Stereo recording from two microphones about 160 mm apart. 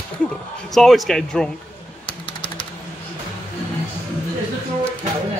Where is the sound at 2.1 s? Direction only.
30° left (ahead or behind).